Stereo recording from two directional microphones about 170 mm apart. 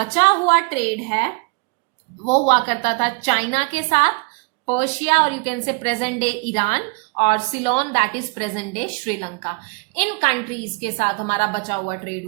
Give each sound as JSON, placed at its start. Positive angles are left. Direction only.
{"t": 0.0, "sound": "a woman's voice", "side_deg": 40}
{"t": 2.2, "sound": "a woman's voice", "side_deg": 40}